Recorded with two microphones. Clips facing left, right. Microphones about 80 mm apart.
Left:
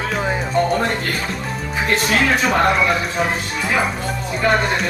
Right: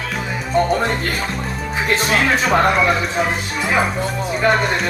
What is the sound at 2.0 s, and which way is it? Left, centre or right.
Speech, right.